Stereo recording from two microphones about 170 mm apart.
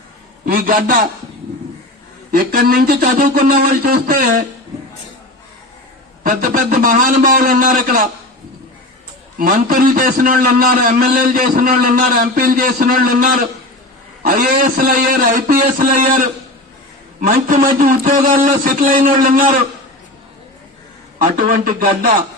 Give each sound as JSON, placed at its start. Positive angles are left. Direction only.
{"t": 0.4, "sound": "a sound", "side_deg": -55}
{"t": 2.3, "sound": "a man's voice", "side_deg": -60}
{"t": 6.2, "sound": "a man's voice", "side_deg": -50}
{"t": 9.4, "sound": "a man's voice", "side_deg": -55}
{"t": 21.2, "sound": "a man's voice", "side_deg": -55}